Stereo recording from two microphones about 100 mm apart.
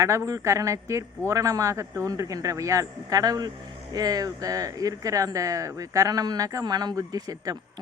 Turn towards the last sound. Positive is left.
turn(degrees=-35)  # may be behind; listen again after turning